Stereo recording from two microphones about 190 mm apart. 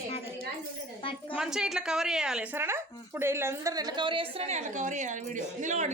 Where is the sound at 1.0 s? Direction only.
25° left (ahead or behind).